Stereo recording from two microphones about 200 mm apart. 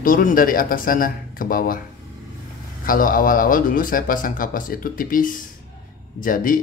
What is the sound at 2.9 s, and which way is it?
Speech, 45° left (ahead or behind).